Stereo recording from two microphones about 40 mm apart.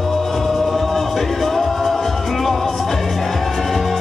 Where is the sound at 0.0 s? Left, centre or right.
Centre.